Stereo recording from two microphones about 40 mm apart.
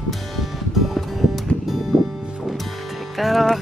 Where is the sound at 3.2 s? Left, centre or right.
Centre.